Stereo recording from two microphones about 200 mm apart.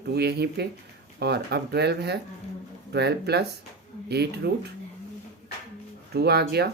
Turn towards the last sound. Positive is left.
turn(degrees=-55)  # may be behind; listen again after turning